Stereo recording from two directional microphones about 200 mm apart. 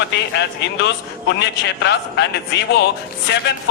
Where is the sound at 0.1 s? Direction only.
60° left (ahead or behind).